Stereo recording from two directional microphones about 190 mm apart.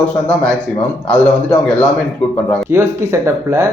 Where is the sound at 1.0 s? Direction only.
5° left (ahead or behind).